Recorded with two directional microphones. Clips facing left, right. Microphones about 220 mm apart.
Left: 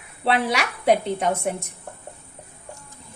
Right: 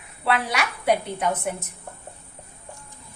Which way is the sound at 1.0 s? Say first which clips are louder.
Left 3 dB; 25° left (ahead or behind).